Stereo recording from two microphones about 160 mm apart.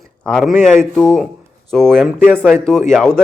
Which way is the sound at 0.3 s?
5° left (ahead or behind).